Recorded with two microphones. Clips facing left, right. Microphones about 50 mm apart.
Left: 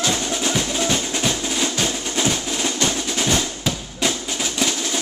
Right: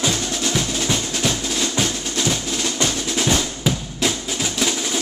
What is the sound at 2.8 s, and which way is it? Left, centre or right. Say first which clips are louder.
Drum: even; centre.